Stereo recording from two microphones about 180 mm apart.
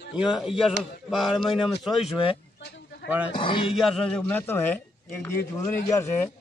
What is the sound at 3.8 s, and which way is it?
A man's voice, centre (ahead or behind).